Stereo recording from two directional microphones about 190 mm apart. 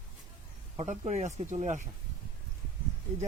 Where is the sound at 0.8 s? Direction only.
40° right (ahead or behind).